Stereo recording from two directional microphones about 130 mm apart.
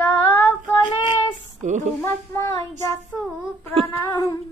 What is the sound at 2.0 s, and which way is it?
Speech, 20° left (ahead or behind).